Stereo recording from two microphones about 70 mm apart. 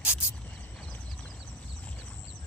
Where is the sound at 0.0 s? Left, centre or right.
Centre.